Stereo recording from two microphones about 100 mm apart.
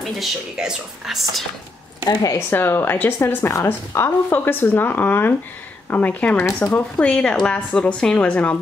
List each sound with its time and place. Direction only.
0.0 s speech: centre (ahead or behind)
2.3 s a woman's voice: 25° left (ahead or behind)